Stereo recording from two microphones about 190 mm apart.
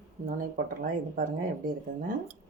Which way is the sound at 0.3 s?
45° right (ahead or behind).